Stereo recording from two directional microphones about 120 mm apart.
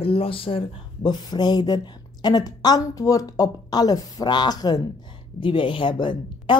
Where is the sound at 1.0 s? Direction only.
35° left (ahead or behind).